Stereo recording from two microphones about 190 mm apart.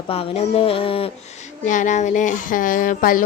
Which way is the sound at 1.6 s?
40° left (ahead or behind).